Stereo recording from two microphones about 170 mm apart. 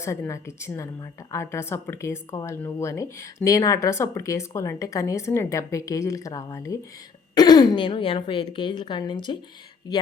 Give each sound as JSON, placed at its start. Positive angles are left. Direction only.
{"t": 0.0, "sound": "speech", "side_deg": 15}